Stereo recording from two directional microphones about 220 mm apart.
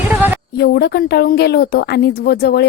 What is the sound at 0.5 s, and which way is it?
A woman's voice, 45° left (ahead or behind).